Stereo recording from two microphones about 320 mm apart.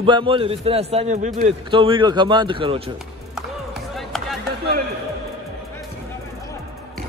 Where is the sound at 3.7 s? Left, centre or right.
Centre.